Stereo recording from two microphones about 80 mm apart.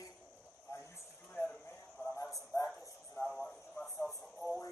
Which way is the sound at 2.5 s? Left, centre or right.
Left.